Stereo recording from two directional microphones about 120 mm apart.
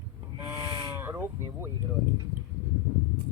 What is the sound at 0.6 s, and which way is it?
Sheep, 40° right (ahead or behind).